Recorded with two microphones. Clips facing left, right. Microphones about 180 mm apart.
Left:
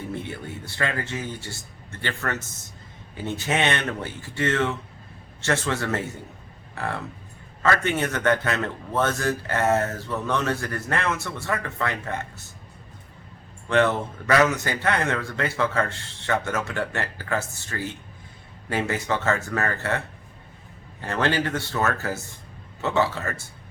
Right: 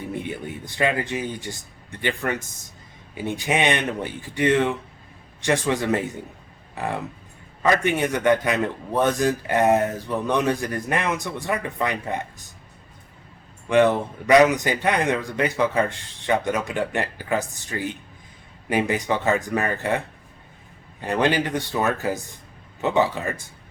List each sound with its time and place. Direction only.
0.0 s a man's voice: 15° right (ahead or behind)
13.7 s a man's voice: 15° right (ahead or behind)
21.0 s a man's voice: 15° right (ahead or behind)